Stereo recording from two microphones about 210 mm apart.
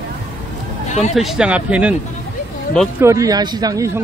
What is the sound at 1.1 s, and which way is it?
Speech, centre (ahead or behind).